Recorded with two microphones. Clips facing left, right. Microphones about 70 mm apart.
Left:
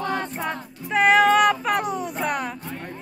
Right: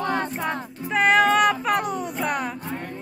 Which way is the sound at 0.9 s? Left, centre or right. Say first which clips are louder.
Left 2 dB; centre.